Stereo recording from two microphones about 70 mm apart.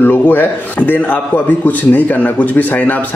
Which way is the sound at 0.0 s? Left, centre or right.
Left.